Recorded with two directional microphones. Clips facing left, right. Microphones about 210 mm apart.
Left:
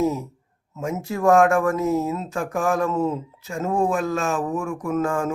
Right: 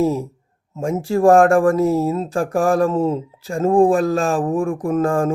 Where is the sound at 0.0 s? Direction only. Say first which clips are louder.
Right 4 dB; 30° right (ahead or behind).